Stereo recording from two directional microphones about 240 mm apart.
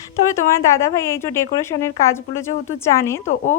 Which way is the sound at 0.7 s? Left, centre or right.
Centre.